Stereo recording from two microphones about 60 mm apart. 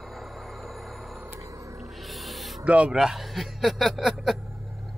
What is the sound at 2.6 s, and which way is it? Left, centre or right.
Speech, centre.